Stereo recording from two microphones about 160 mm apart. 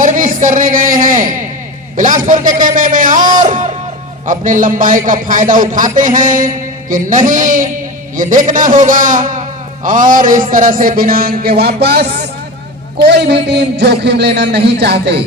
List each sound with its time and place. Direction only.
0.0 s a sound: 55° right (ahead or behind)
2.0 s a man's voice: 55° right (ahead or behind)
3.4 s music: 50° right (ahead or behind)
4.3 s a man's voice: 55° right (ahead or behind); by 15.2 s 90° right